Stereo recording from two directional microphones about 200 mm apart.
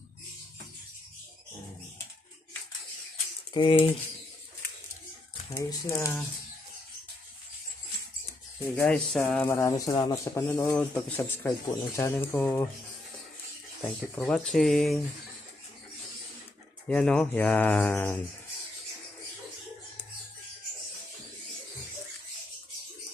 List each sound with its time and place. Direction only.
3.5 s speech: 25° left (ahead or behind)
5.5 s speech: 15° left (ahead or behind)
8.7 s speech: 5° left (ahead or behind)
13.8 s speech: 5° left (ahead or behind)
16.9 s speech: 5° left (ahead or behind)